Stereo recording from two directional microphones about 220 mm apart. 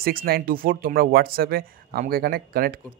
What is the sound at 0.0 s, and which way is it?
Speech, 40° right (ahead or behind).